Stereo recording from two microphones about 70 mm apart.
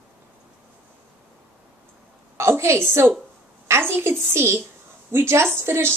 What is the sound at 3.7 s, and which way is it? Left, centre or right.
A woman's voice, right.